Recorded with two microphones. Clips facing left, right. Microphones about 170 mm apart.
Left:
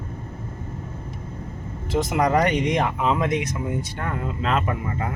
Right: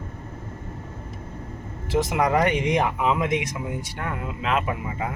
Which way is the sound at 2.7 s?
15° right (ahead or behind).